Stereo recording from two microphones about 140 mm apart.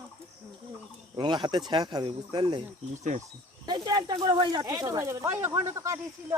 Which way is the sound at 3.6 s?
30° right (ahead or behind).